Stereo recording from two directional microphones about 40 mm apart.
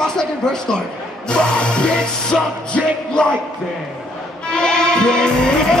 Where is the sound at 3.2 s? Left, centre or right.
Left.